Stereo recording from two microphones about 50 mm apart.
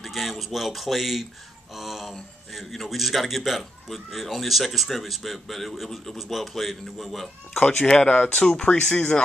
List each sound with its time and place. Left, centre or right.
0.0 s a man's voice: centre
1.7 s a sound: centre
2.5 s a man's voice: centre
7.5 s speech: left
7.8 s speech: centre
8.9 s speech: left